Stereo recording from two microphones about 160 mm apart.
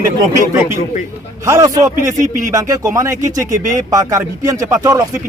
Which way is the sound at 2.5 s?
20° right (ahead or behind).